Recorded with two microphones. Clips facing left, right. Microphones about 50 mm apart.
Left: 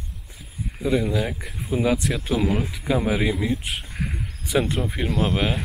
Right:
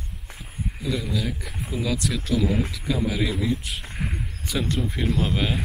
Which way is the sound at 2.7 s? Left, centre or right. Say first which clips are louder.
Left 3 dB; left.